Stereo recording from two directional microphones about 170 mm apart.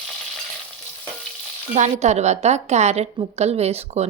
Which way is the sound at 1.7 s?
45° right (ahead or behind).